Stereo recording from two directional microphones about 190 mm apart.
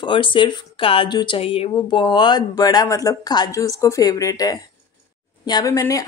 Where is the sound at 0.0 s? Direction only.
25° left (ahead or behind).